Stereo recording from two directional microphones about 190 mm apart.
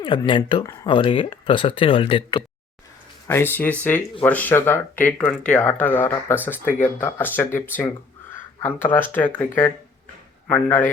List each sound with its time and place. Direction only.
0.0 s speech: 25° left (ahead or behind)
3.2 s speech: 10° left (ahead or behind)